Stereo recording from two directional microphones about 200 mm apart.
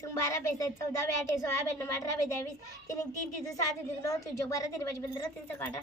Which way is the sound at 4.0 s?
15° left (ahead or behind).